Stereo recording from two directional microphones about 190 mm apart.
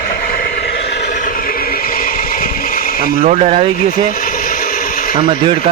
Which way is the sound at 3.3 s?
35° right (ahead or behind).